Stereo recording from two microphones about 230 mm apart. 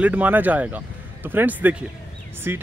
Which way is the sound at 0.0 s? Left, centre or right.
Centre.